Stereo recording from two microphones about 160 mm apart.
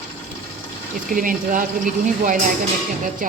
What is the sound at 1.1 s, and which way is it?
Speech, 60° right (ahead or behind).